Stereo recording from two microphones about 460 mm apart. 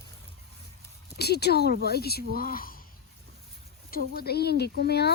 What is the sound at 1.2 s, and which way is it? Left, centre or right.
Speech, left.